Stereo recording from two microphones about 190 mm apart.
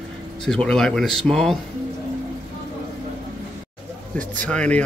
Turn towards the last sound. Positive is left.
turn(degrees=5)  # may be behind; listen again after turning